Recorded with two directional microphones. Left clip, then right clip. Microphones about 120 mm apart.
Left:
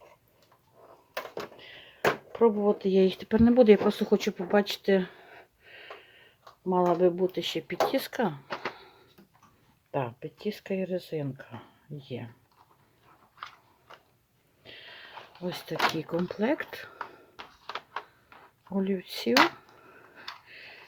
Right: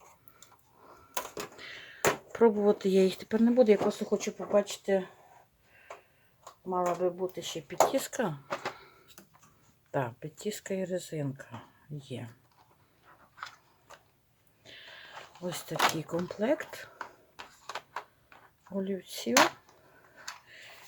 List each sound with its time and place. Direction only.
1.1 s a sound: 25° right (ahead or behind)
2.3 s speech: 20° right (ahead or behind)
3.2 s speech: 25° left (ahead or behind)
3.7 s speech: 55° left (ahead or behind)
6.7 s speech: 80° left
7.9 s speech: 25° left (ahead or behind)
9.9 s speech: 5° left (ahead or behind)
14.6 s a sound: 20° left (ahead or behind)
15.9 s speech: 20° left (ahead or behind)
17.3 s a sound: 15° left (ahead or behind)
18.7 s speech: 40° left (ahead or behind)
19.3 s a sound: 20° left (ahead or behind)